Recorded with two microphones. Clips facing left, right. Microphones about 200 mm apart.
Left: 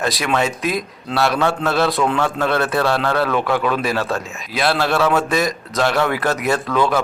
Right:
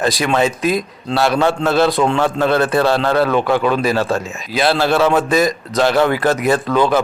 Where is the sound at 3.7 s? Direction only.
Centre (ahead or behind).